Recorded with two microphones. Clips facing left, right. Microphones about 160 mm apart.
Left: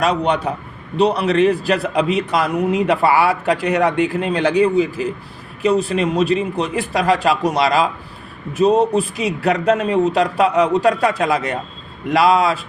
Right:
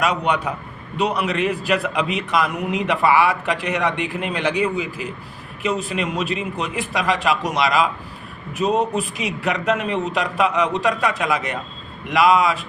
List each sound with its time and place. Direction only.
0.0 s a man's voice: 30° left (ahead or behind)